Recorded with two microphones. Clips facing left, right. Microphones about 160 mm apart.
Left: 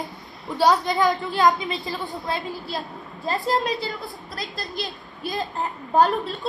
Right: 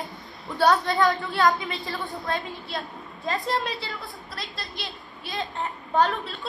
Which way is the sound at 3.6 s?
40° left (ahead or behind).